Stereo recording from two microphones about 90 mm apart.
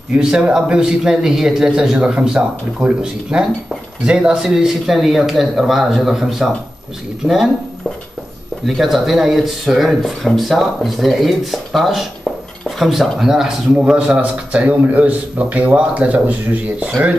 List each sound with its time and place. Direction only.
0.2 s speech: 10° right (ahead or behind)
8.6 s speech: 5° right (ahead or behind)